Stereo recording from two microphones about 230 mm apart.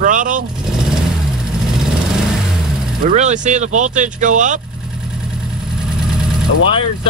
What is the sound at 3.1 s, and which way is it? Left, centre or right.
Speech, right.